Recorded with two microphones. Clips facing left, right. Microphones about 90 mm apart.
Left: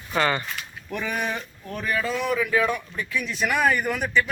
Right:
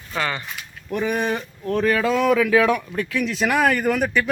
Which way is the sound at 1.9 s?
85° right.